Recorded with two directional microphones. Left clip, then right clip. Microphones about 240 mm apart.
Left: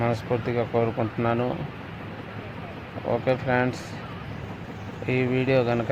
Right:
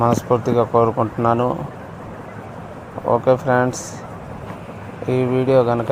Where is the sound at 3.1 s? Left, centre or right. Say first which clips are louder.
Right 8 dB; centre.